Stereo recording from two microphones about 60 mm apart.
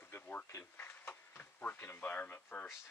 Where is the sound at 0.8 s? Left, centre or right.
Left.